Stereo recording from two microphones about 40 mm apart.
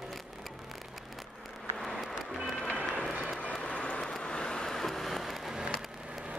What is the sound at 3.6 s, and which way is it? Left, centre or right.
Vehicle, left.